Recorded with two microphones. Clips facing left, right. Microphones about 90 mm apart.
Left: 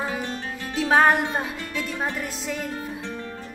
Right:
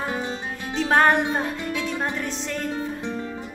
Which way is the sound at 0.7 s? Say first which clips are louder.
Even; 5° left (ahead or behind).